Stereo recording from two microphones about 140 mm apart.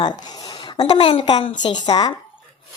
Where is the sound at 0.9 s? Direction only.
40° left (ahead or behind).